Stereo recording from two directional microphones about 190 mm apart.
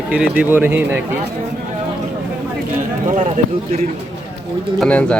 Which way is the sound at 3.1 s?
45° right (ahead or behind).